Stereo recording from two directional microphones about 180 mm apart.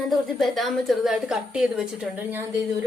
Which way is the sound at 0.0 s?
Centre (ahead or behind).